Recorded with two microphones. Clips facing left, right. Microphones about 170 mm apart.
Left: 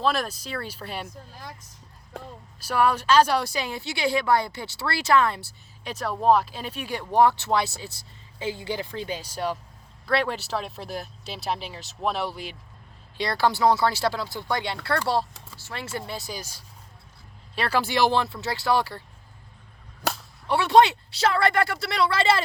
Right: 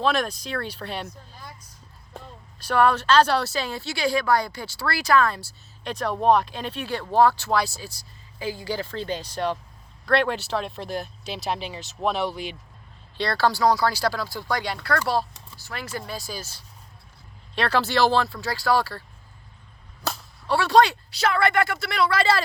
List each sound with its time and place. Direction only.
0.0 s speech: 5° left (ahead or behind)
2.6 s speech: 10° left (ahead or behind)
5.8 s speech: 5° left (ahead or behind)
13.1 s speech: 15° left (ahead or behind)
20.1 s whip: 20° left (ahead or behind)